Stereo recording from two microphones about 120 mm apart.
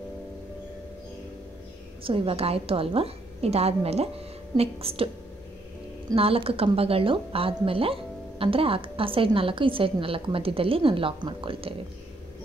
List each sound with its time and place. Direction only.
2.0 s a woman's voice: 50° right (ahead or behind)
6.1 s a woman's voice: 50° right (ahead or behind)